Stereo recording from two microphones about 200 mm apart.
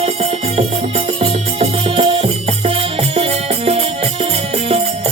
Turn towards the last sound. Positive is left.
turn(degrees=-30)  # may be behind; listen again after turning